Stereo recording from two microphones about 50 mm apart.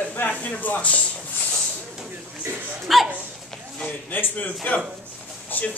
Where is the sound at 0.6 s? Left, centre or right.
Left.